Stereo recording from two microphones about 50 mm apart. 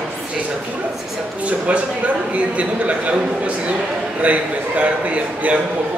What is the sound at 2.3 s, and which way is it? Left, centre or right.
A man's voice, right.